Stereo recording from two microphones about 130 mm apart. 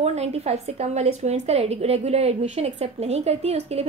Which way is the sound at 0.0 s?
55° right (ahead or behind).